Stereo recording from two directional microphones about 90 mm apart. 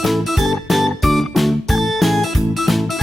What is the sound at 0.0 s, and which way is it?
Music, centre (ahead or behind).